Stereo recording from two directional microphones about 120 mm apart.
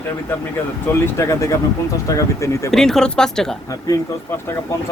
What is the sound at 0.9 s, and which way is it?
Speech, 25° left (ahead or behind).